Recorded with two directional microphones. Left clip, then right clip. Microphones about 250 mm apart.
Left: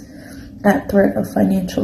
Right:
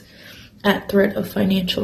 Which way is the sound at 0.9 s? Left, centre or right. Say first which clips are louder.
Left 3 dB; right.